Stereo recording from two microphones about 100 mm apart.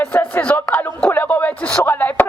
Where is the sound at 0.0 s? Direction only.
15° left (ahead or behind).